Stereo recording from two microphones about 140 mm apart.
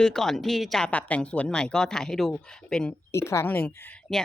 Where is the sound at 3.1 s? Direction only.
20° left (ahead or behind).